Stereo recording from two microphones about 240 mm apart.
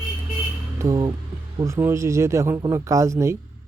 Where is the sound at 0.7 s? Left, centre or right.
Centre.